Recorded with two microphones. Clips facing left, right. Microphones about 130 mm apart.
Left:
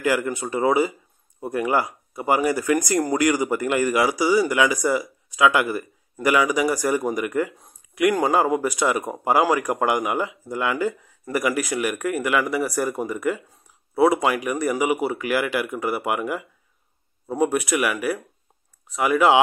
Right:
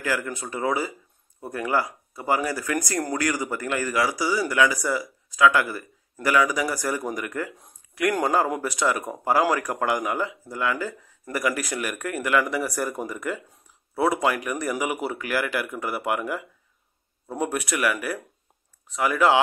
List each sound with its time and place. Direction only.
0.0 s speech: 20° left (ahead or behind)